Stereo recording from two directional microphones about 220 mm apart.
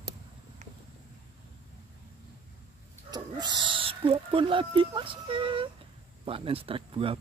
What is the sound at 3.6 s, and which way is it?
Speech, 25° right (ahead or behind).